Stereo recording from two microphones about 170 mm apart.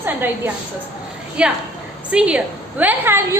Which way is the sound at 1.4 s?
5° right (ahead or behind).